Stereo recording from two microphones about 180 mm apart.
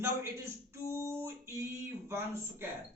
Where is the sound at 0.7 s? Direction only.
15° right (ahead or behind).